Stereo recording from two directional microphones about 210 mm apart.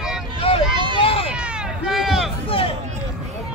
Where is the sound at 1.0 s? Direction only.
25° left (ahead or behind).